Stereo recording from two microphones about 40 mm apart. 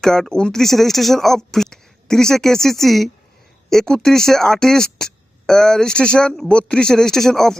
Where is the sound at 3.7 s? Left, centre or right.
Centre.